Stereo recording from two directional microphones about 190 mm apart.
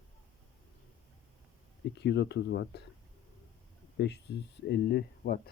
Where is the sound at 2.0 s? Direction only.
65° left (ahead or behind).